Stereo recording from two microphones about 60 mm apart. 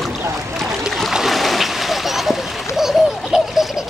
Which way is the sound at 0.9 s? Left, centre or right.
Centre.